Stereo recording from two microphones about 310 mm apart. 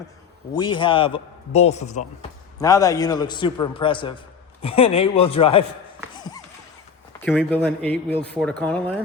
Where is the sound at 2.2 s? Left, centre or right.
Centre.